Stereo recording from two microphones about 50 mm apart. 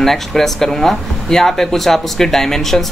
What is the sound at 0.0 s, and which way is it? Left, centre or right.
Speech, centre.